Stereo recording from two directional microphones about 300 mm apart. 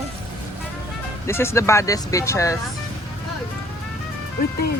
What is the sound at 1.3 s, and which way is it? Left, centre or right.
Speech, centre.